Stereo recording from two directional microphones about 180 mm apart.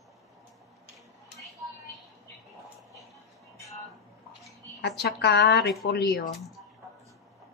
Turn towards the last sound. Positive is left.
turn(degrees=65)  # may be behind; listen again after turning